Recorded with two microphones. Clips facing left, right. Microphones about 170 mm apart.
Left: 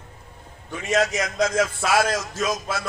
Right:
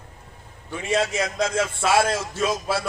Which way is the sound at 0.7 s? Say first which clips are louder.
Left 1 dB; 30° right (ahead or behind).